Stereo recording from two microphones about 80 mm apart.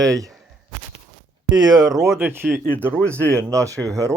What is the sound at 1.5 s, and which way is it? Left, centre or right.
Speech, right.